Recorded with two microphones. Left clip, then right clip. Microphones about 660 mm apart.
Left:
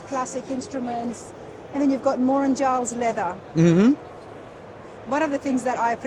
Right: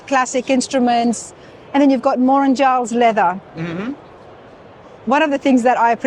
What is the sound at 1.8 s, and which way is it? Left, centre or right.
Speech, right.